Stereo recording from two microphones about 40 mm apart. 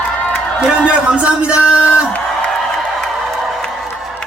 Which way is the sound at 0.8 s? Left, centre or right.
Right.